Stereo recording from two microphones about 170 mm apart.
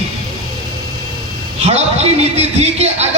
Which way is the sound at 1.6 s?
40° right (ahead or behind).